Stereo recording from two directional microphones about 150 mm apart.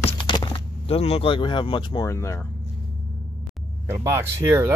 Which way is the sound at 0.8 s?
40° left (ahead or behind).